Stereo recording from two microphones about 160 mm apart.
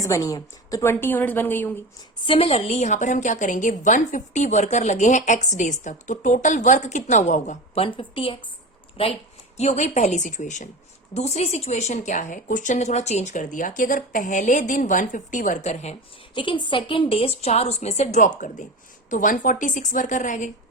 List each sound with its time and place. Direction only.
0.0 s a woman's voice: 20° left (ahead or behind)
2.2 s a woman's voice: 35° left (ahead or behind)
7.9 s a woman's voice: 35° left (ahead or behind)
16.3 s a woman's voice: 30° left (ahead or behind); by 20.5 s 50° left (ahead or behind)